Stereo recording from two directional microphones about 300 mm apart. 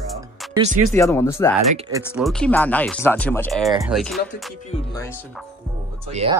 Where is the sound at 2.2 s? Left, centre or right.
Centre.